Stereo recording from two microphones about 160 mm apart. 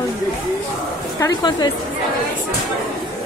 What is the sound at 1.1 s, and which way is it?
Speech, 25° left (ahead or behind).